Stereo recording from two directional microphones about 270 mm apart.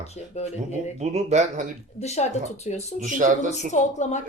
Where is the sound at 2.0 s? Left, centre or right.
Left.